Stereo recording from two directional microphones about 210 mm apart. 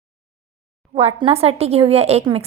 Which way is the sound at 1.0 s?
30° right (ahead or behind).